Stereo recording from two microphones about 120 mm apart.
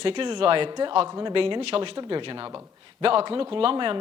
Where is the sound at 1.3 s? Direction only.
50° right (ahead or behind).